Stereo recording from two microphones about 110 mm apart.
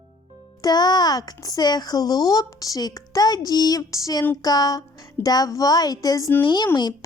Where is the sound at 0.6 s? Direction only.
40° left (ahead or behind).